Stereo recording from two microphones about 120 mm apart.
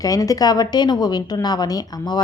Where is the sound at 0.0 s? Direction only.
30° left (ahead or behind).